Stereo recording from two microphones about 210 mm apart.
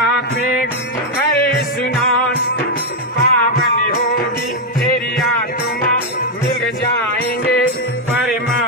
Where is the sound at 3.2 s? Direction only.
45° left (ahead or behind).